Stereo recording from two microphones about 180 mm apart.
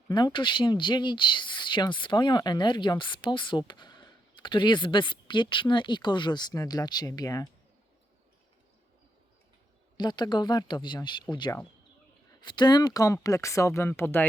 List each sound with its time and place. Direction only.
0.1 s speech: 25° left (ahead or behind)
10.0 s speech: 25° left (ahead or behind)